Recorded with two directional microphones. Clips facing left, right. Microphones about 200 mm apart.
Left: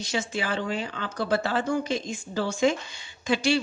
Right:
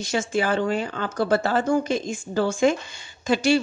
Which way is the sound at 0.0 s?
45° right (ahead or behind).